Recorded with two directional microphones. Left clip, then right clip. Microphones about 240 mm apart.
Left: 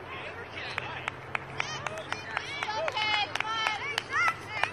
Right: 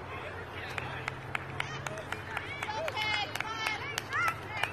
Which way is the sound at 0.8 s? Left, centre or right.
Left.